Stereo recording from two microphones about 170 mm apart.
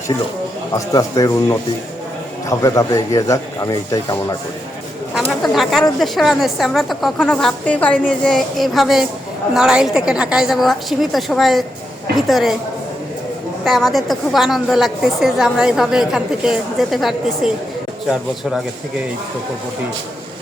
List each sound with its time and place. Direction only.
0.7 s a man's voice: 20° left (ahead or behind)
5.3 s a woman's voice: centre (ahead or behind)
13.7 s a woman's voice: centre (ahead or behind)